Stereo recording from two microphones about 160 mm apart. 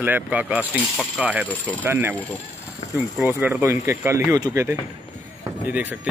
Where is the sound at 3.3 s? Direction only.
10° right (ahead or behind).